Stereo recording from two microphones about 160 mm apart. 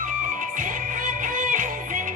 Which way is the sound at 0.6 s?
55° right (ahead or behind).